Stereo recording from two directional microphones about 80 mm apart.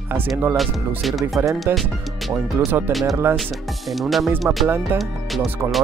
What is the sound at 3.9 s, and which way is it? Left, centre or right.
Speech, centre.